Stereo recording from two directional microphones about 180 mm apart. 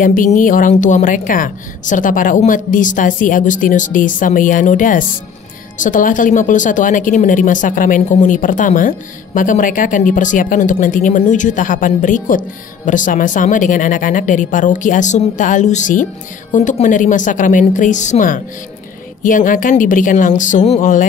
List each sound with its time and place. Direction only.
0.0 s speech: 50° left (ahead or behind)